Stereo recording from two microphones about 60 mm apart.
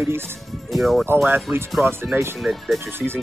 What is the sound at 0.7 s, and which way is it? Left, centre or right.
Speech, centre.